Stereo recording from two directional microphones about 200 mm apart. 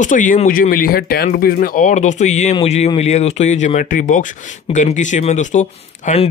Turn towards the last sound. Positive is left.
turn(degrees=35)  # may be behind; listen again after turning